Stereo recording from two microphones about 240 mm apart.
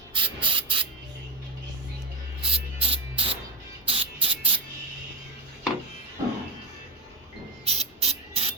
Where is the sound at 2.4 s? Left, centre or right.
Right.